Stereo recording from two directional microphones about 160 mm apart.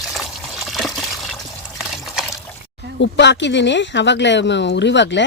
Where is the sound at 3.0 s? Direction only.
90° left.